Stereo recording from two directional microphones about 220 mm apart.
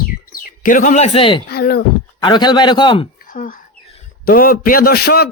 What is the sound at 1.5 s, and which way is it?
Speech, 45° left (ahead or behind).